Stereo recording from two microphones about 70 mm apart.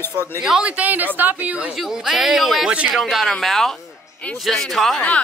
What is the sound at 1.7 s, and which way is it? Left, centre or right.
A man's voice, centre.